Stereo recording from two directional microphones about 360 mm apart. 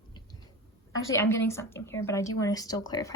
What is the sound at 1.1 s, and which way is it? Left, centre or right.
Speech, centre.